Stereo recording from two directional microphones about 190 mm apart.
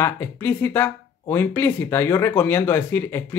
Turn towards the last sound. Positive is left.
turn(degrees=10)  # may be behind; listen again after turning